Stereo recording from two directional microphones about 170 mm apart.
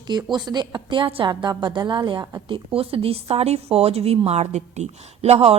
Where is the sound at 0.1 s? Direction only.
25° right (ahead or behind).